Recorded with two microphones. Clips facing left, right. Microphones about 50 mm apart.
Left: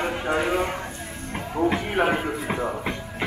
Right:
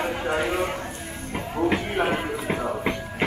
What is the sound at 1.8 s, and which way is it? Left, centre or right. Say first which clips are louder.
Speech: left 2 dB; centre.